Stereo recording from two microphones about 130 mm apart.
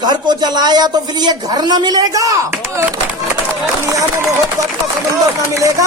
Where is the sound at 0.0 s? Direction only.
35° right (ahead or behind).